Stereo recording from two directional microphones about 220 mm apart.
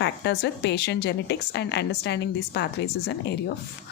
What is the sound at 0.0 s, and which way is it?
A woman's voice, 50° left (ahead or behind).